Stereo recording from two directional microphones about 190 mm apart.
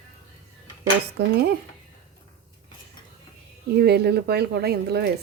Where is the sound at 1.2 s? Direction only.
60° right (ahead or behind).